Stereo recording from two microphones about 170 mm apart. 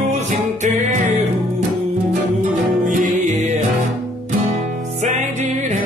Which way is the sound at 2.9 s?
45° right (ahead or behind).